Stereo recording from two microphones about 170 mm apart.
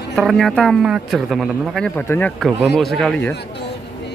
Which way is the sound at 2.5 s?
Centre (ahead or behind).